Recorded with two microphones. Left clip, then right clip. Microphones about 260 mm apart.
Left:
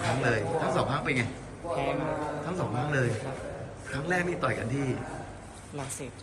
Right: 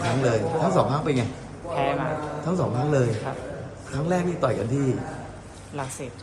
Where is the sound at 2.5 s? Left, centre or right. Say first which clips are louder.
Right 11 dB; centre.